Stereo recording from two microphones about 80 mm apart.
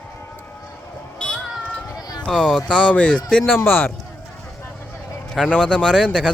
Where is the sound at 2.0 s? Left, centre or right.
Left.